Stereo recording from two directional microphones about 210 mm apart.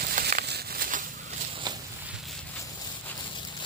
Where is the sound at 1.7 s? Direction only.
20° right (ahead or behind).